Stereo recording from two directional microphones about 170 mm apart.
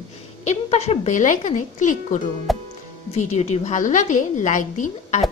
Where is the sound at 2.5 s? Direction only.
Centre (ahead or behind).